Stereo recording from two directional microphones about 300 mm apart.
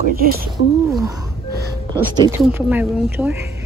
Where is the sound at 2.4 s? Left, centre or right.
Centre.